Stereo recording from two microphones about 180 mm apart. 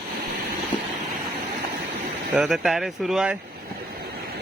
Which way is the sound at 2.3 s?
Centre (ahead or behind).